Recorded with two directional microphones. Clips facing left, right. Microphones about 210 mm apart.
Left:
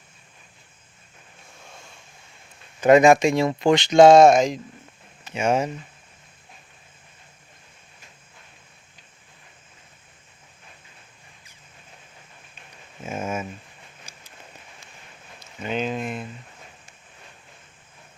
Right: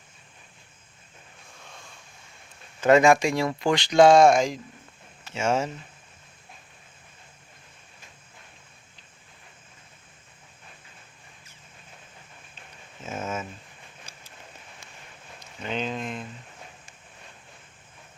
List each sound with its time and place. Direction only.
2.8 s speech: 15° left (ahead or behind)
13.0 s speech: 10° left (ahead or behind)
15.6 s speech: 10° left (ahead or behind)